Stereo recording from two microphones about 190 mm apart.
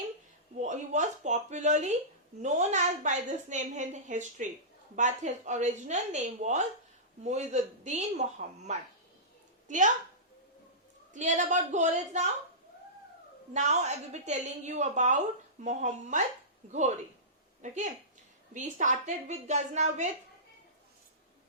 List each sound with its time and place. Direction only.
0.6 s a woman's voice: 40° right (ahead or behind)
11.1 s a woman's voice: 40° right (ahead or behind)
13.5 s a woman's voice: 35° right (ahead or behind)
17.6 s a woman's voice: 40° right (ahead or behind)